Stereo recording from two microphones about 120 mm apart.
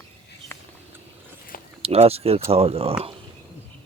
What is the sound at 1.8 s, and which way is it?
Speech, 55° right (ahead or behind).